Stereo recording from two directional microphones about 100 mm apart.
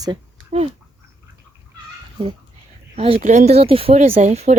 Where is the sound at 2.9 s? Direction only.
80° right.